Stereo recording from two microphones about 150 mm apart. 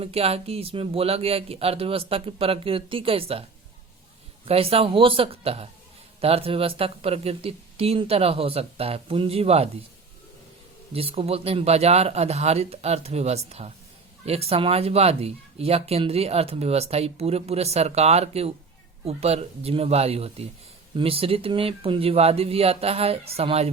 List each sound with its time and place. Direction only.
0.0 s speech: 40° right (ahead or behind)
4.4 s speech: 40° right (ahead or behind)
10.9 s speech: 40° right (ahead or behind)